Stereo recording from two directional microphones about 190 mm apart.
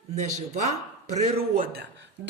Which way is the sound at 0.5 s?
35° right (ahead or behind).